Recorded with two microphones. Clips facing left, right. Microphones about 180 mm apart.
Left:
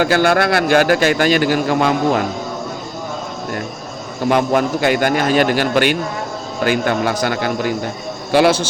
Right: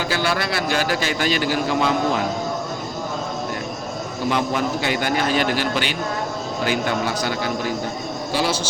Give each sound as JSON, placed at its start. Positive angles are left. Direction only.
{"t": 0.0, "sound": "a man's voice", "side_deg": 55}
{"t": 4.3, "sound": "a man's voice", "side_deg": 55}